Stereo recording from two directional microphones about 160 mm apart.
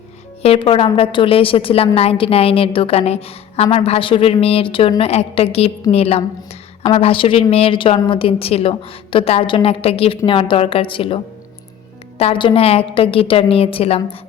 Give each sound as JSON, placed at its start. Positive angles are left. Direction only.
{"t": 0.4, "sound": "a woman's voice", "side_deg": 35}
{"t": 12.2, "sound": "a woman's voice", "side_deg": 35}